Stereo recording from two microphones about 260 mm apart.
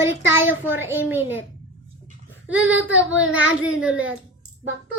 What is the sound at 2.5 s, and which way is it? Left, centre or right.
Speech, right.